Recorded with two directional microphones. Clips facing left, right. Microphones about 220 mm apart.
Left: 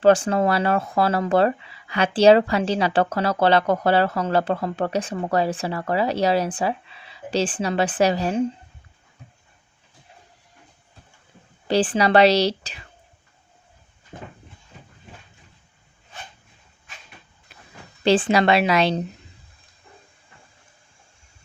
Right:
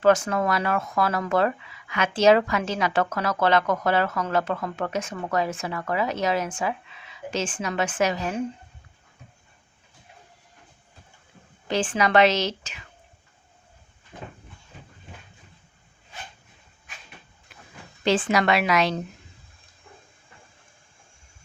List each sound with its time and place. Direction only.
0.0 s speech: 30° left (ahead or behind)
11.7 s speech: 35° left (ahead or behind)
14.1 s a sound: 50° left (ahead or behind)
18.0 s a woman's voice: 30° left (ahead or behind)